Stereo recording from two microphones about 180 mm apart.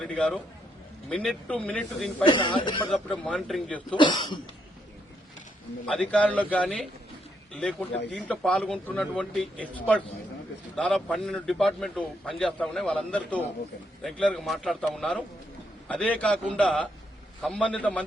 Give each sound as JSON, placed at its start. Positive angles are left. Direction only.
{"t": 0.0, "sound": "a man's voice", "side_deg": 5}
{"t": 2.2, "sound": "speech", "side_deg": 30}
{"t": 2.9, "sound": "a man's voice", "side_deg": 5}
{"t": 3.9, "sound": "speech", "side_deg": 25}
{"t": 5.8, "sound": "a man's voice", "side_deg": 5}